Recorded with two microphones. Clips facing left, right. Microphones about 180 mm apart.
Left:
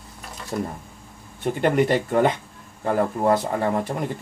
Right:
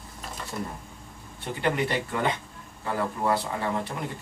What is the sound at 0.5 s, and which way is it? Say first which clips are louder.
A man's voice: left 9 dB; 50° left (ahead or behind).